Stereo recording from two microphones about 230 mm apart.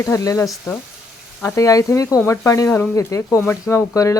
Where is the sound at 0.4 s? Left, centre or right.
Centre.